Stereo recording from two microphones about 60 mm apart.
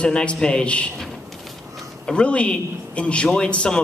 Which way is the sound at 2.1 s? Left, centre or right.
Centre.